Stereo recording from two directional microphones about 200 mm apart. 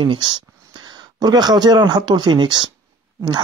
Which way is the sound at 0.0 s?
25° right (ahead or behind).